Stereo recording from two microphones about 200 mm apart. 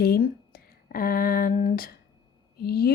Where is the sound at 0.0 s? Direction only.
50° left (ahead or behind).